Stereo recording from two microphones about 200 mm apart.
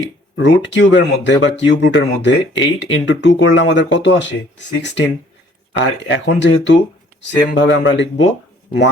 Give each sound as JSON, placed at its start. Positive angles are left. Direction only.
{"t": 0.3, "sound": "speech", "side_deg": 65}